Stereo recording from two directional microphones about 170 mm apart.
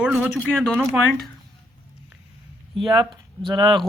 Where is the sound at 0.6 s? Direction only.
5° left (ahead or behind).